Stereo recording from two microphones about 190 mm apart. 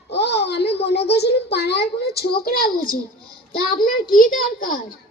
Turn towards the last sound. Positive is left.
turn(degrees=45)  # may be behind; listen again after turning